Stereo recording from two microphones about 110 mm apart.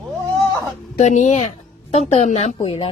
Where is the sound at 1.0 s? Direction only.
90° left.